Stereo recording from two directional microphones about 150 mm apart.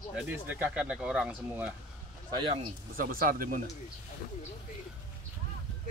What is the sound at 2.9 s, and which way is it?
Speech, 75° right (ahead or behind).